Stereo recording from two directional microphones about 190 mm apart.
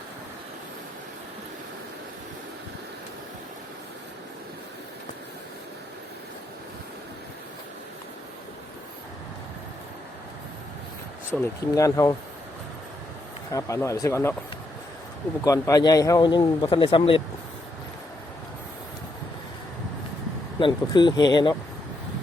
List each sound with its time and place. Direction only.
11.3 s speech: 15° left (ahead or behind)
13.5 s speech: 15° left (ahead or behind)
15.4 s a man's voice: 15° left (ahead or behind)
20.6 s a man's voice: 25° left (ahead or behind)